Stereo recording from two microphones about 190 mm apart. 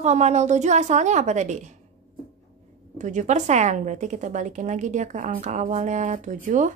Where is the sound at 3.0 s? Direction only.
40° right (ahead or behind).